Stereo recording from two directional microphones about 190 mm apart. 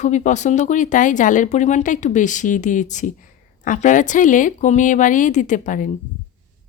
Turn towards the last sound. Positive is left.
turn(degrees=45)  # may be behind; listen again after turning